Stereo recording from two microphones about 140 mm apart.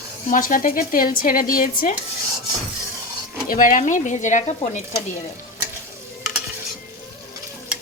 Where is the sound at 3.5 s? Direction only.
75° left (ahead or behind).